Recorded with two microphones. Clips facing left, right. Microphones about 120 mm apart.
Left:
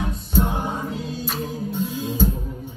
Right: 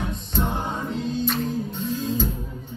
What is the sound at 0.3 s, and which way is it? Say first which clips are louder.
Music: left 4 dB; 10° left (ahead or behind).